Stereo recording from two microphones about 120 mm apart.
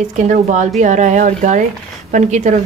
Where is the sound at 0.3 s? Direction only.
90° right.